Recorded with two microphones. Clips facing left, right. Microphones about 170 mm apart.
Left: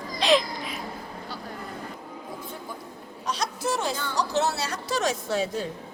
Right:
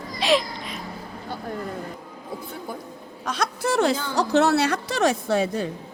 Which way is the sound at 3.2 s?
55° right (ahead or behind).